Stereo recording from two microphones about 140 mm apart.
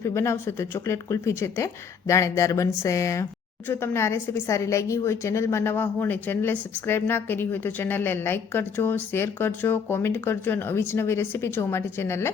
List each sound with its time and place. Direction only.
0.0 s a woman's voice: 20° left (ahead or behind)